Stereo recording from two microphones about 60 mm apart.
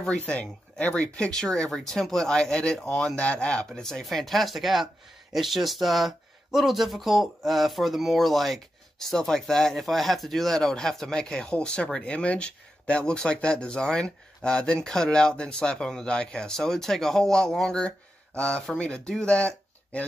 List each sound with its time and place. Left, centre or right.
0.0 s speech: centre